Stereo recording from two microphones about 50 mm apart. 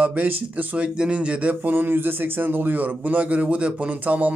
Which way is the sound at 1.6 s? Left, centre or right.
Right.